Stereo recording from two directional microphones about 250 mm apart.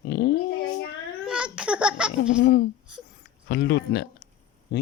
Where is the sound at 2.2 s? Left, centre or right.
Left.